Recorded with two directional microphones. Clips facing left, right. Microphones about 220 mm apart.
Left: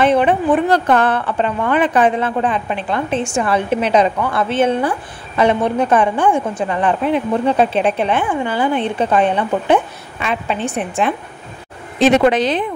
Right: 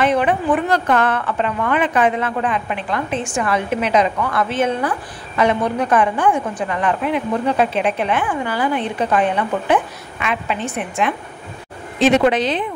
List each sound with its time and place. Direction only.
0.0 s a woman's voice: 30° left (ahead or behind)
12.3 s speech: 45° left (ahead or behind)